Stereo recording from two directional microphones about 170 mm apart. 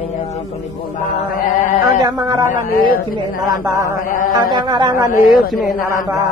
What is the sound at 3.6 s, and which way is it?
A woman's voice, 20° right (ahead or behind).